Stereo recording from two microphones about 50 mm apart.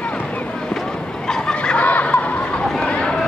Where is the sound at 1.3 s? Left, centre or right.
Centre.